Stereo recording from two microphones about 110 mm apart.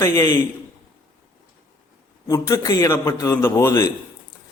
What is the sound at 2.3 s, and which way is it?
A man's voice, 30° left (ahead or behind).